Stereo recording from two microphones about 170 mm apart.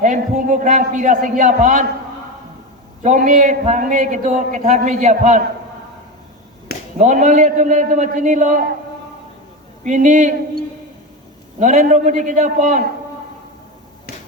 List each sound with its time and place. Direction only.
0.0 s a man's voice: 45° right (ahead or behind)
3.0 s a man's voice: 45° right (ahead or behind)
7.0 s a man's voice: 45° right (ahead or behind)
9.8 s a man's voice: 45° right (ahead or behind)
11.6 s a man's voice: 45° right (ahead or behind)
14.1 s finger snapping: 65° left (ahead or behind)